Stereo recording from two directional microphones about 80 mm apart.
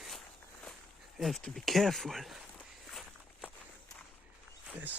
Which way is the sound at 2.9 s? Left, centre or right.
Centre.